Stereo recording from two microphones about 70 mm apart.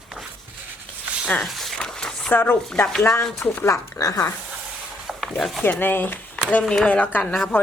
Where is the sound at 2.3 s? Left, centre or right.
Left.